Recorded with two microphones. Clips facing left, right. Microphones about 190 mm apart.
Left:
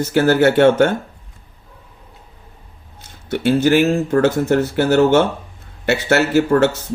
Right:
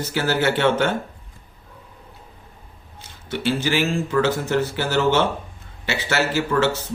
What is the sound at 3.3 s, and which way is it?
Speech, 55° left (ahead or behind).